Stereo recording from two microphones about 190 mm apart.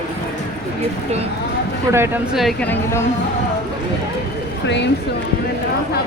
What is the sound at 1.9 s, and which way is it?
Speech, 10° right (ahead or behind).